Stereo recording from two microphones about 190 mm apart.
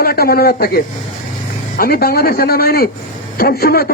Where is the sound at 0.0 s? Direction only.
55° left (ahead or behind).